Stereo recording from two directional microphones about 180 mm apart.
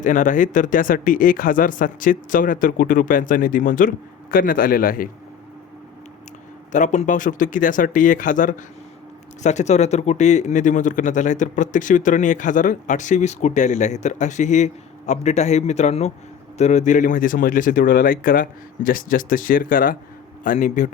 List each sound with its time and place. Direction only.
0.0 s speech: 45° left (ahead or behind)
6.7 s speech: 45° left (ahead or behind)